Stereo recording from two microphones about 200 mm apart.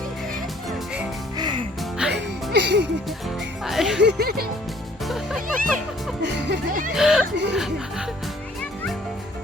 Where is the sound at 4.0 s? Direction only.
55° right (ahead or behind).